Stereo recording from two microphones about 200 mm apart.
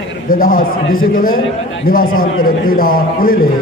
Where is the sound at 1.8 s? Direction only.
45° left (ahead or behind).